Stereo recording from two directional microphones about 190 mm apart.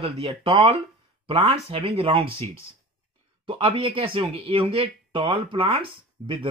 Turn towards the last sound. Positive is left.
turn(degrees=-30)  # may be behind; listen again after turning